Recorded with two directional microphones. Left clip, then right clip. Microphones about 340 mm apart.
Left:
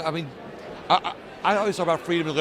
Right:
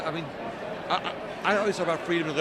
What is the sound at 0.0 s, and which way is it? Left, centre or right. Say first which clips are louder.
A man's voice: left 2 dB; left.